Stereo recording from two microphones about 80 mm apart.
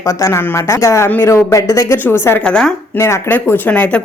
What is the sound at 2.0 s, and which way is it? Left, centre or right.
Speech, left.